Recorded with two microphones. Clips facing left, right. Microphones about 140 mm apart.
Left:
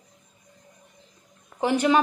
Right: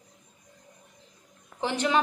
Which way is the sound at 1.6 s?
10° left (ahead or behind).